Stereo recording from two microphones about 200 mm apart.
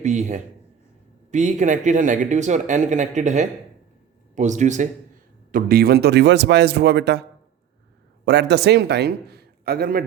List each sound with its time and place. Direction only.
0.0 s a man's voice: 35° right (ahead or behind)